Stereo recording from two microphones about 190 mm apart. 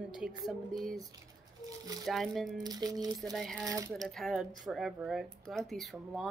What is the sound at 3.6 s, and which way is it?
Speech, 20° right (ahead or behind).